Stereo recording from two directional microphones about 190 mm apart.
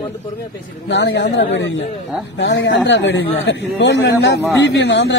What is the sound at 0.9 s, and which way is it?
Speech, 65° left (ahead or behind).